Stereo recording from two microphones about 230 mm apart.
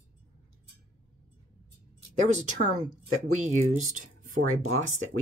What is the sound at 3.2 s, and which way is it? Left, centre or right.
Speech, right.